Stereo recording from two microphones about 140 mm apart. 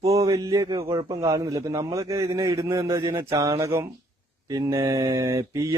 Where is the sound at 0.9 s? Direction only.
30° right (ahead or behind).